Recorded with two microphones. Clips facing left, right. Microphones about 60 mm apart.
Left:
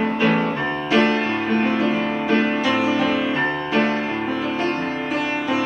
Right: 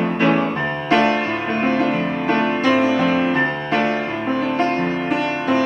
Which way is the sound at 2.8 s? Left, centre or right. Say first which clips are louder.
Right 3 dB; right.